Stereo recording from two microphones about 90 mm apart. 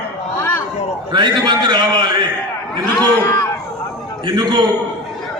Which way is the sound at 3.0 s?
35° left (ahead or behind).